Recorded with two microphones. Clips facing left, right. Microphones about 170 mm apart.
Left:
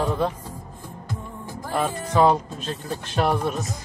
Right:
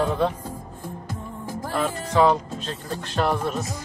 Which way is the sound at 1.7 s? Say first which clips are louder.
Left 1 dB; 15° left (ahead or behind).